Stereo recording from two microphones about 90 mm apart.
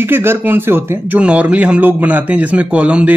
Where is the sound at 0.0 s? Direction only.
25° right (ahead or behind).